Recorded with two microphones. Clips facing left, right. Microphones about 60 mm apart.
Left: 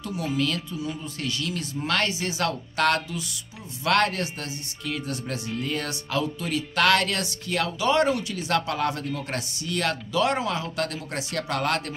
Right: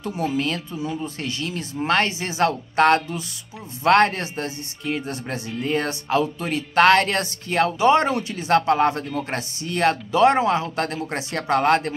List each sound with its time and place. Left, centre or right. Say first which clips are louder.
0.0 s speech: right 3 dB; right